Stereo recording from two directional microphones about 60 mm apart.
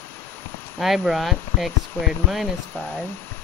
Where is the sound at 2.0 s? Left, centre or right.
Left.